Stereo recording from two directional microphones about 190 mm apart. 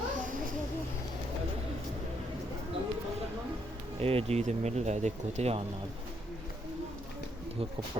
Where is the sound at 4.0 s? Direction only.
30° right (ahead or behind).